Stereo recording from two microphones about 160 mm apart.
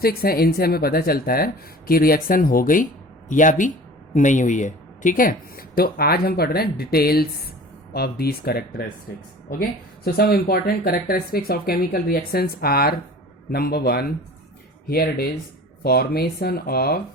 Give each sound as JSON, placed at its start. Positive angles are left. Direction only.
{"t": 0.0, "sound": "speech", "side_deg": 70}